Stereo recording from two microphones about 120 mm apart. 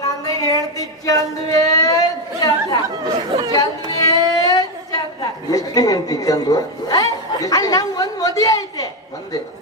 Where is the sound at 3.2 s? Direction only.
30° right (ahead or behind).